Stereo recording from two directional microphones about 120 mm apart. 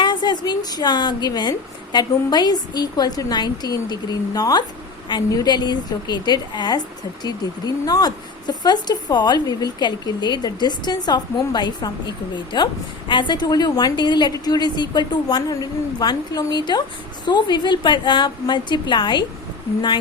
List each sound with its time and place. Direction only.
0.0 s a woman's voice: 40° left (ahead or behind)